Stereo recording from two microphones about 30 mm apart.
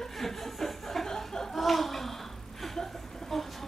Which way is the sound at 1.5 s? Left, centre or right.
Centre.